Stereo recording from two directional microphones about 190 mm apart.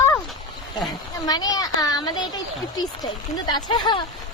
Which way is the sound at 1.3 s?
20° left (ahead or behind).